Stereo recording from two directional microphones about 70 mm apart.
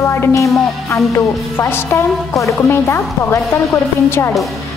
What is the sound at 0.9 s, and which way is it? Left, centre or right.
Music, left.